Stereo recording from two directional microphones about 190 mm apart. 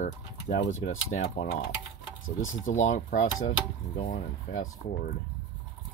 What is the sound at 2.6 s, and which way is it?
Speech, 40° left (ahead or behind).